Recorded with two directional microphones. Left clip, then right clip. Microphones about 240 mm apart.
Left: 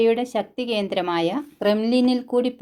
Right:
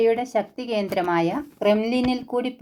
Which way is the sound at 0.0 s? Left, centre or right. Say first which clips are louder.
Even; left.